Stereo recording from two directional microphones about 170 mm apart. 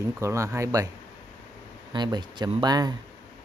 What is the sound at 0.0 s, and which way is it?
Speech, 15° right (ahead or behind).